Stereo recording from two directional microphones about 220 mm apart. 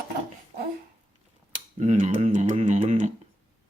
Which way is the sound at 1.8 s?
35° right (ahead or behind).